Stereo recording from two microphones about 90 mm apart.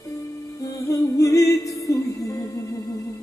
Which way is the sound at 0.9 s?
35° left (ahead or behind).